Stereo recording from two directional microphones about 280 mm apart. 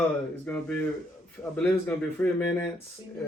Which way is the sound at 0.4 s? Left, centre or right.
Centre.